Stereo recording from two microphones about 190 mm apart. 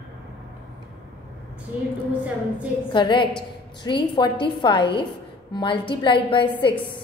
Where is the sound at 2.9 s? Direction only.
25° left (ahead or behind).